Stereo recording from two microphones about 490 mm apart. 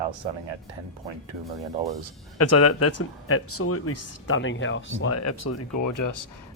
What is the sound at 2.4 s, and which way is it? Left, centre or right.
Speech, left.